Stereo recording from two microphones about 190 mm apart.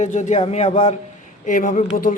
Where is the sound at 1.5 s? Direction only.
45° left (ahead or behind).